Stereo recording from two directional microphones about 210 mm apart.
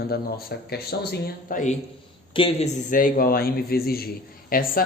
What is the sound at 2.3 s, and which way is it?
Speech, 25° left (ahead or behind).